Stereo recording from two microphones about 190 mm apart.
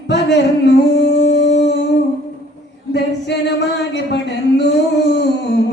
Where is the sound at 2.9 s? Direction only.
65° left (ahead or behind).